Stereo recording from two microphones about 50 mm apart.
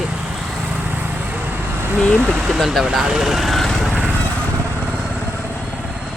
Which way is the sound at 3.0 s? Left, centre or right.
Centre.